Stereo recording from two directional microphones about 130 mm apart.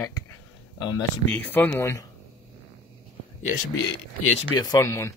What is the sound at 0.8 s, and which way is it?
Speech, 30° left (ahead or behind).